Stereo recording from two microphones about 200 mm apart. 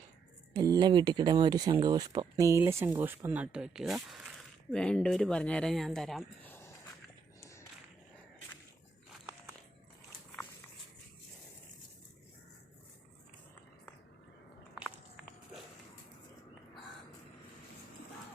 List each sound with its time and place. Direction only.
0.5 s speech: 20° right (ahead or behind); by 6.7 s 10° left (ahead or behind)